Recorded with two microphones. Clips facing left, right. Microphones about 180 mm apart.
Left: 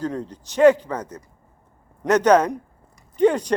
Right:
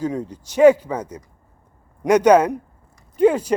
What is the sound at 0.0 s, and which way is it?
Speech, 10° right (ahead or behind).